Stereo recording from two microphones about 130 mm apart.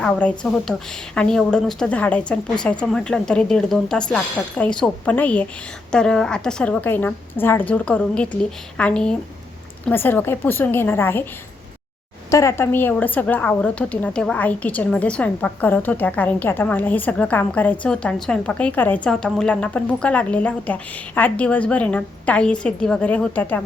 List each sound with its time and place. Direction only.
0.0 s speech: 10° left (ahead or behind)
12.3 s speech: 25° left (ahead or behind)